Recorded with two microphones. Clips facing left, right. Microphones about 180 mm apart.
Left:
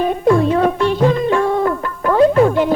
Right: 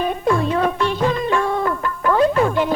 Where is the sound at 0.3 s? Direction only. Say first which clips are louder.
Left 6 dB; 35° left (ahead or behind).